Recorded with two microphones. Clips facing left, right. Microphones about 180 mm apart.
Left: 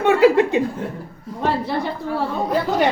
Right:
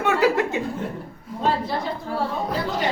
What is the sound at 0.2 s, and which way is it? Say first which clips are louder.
Chuckle: left 6 dB; 20° left (ahead or behind).